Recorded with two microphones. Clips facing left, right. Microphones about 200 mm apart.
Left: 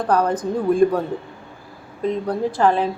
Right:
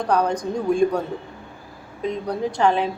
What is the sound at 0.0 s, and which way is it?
A woman's voice, 5° left (ahead or behind).